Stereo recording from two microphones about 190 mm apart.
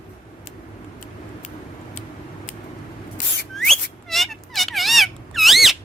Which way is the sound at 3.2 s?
45° left (ahead or behind).